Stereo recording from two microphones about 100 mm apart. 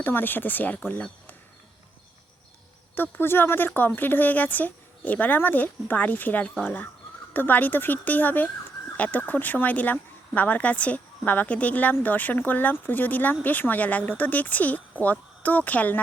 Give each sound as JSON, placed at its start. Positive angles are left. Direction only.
{"t": 0.0, "sound": "speech", "side_deg": 20}
{"t": 2.9, "sound": "speech", "side_deg": 20}